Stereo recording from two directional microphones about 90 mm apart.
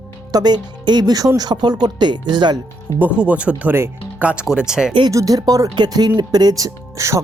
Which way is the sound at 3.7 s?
25° right (ahead or behind).